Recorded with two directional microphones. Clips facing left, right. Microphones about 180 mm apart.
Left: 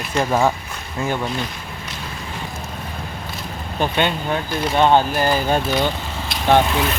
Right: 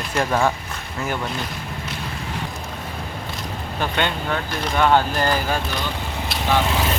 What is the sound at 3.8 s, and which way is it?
Speech, 20° left (ahead or behind).